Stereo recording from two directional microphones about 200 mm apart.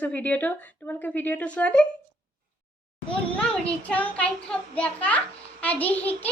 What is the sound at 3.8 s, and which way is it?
Speech, 5° left (ahead or behind).